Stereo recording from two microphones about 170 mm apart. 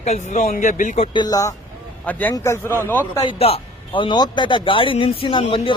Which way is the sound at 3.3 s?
35° left (ahead or behind).